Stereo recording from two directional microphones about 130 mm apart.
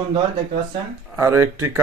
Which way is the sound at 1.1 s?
20° right (ahead or behind).